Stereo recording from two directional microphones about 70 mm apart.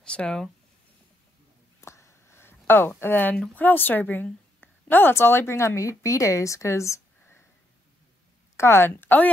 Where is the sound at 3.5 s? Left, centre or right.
Left.